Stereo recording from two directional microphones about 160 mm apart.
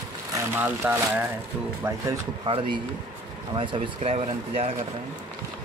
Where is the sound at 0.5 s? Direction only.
10° right (ahead or behind).